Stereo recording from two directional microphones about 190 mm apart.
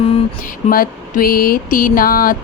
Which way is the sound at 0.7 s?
50° left (ahead or behind).